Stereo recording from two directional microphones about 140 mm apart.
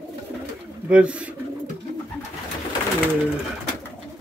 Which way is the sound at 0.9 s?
10° right (ahead or behind).